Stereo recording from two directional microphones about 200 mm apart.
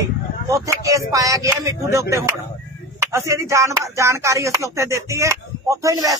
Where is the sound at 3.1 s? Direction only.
15° right (ahead or behind).